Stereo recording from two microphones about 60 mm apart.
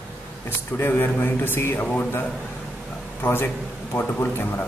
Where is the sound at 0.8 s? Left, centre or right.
Left.